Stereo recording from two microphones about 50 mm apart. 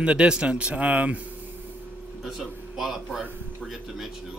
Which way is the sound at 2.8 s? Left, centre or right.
Centre.